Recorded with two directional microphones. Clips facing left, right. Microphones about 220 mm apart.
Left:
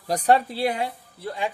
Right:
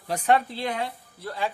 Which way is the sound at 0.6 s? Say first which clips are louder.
Left 4 dB; 10° left (ahead or behind).